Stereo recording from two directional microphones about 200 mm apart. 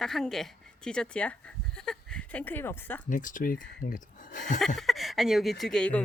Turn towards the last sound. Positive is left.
turn(degrees=5)  # may be behind; listen again after turning